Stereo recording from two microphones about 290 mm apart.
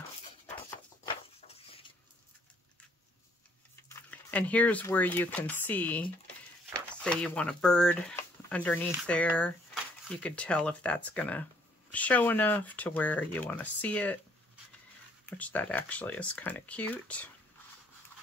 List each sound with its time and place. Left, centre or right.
1.0 s a sound: centre
3.9 s speech: centre
15.2 s speech: centre